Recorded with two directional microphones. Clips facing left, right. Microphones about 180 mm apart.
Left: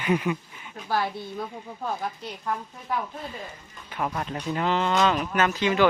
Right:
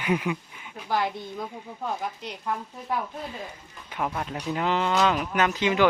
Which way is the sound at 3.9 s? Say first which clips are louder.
Even; 5° right (ahead or behind).